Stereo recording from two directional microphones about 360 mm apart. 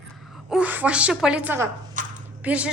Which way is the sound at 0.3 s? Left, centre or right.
Centre.